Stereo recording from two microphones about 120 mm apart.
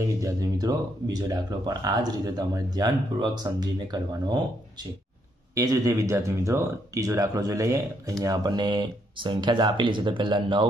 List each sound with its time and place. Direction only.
0.0 s speech: 25° right (ahead or behind)
5.5 s speech: 30° right (ahead or behind)